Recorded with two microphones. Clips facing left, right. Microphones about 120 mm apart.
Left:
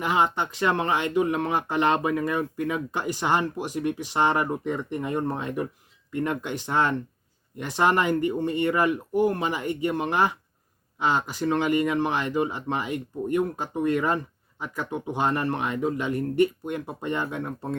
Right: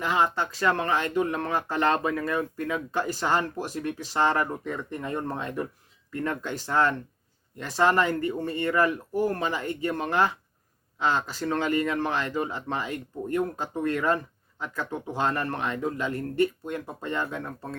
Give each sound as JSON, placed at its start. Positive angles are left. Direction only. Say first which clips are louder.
{"t": 0.0, "sound": "speech", "louder": "left 1 dB", "side_deg": 15}